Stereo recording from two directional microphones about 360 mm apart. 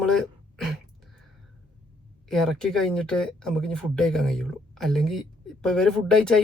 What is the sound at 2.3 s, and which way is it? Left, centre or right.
Speech, centre.